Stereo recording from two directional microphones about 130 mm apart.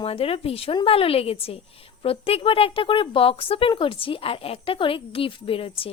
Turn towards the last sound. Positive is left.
turn(degrees=45)  # may be behind; listen again after turning